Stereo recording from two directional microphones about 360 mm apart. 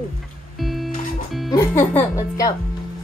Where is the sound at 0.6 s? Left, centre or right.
Centre.